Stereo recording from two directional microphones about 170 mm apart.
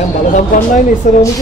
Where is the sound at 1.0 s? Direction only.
45° left (ahead or behind).